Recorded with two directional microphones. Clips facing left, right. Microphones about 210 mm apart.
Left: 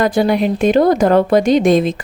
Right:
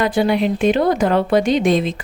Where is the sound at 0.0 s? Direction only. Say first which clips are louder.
Left 2 dB; 40° left (ahead or behind).